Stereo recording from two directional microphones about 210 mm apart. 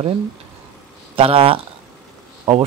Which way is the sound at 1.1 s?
25° right (ahead or behind).